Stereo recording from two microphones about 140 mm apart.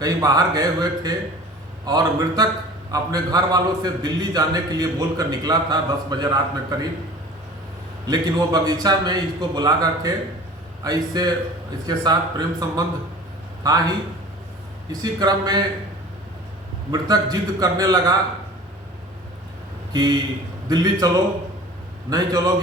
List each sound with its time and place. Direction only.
0.0 s a man's voice: 25° right (ahead or behind)
8.0 s a man's voice: 25° right (ahead or behind)
15.0 s a man's voice: 30° right (ahead or behind)
16.9 s a man's voice: 25° right (ahead or behind)
19.9 s a man's voice: 30° right (ahead or behind)
22.1 s a man's voice: 25° right (ahead or behind)